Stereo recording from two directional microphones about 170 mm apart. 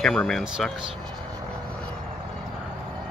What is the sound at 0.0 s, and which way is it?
Speech, centre (ahead or behind).